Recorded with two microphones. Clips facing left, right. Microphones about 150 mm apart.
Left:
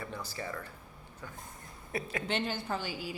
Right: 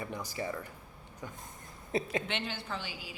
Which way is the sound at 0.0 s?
15° right (ahead or behind).